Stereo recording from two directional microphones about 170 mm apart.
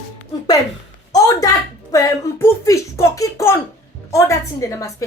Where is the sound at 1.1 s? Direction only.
20° left (ahead or behind).